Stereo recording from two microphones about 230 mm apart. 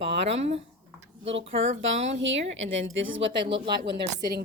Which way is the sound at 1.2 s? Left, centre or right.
Right.